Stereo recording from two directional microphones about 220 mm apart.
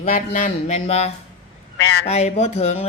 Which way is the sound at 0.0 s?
35° left (ahead or behind).